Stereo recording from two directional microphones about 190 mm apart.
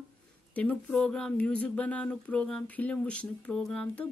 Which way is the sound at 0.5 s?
5° left (ahead or behind).